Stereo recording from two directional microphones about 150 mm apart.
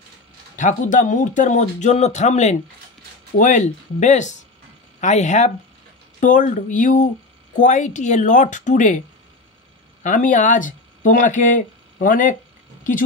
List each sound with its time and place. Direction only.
0.6 s speech: 60° left (ahead or behind)
10.0 s speech: 60° left (ahead or behind)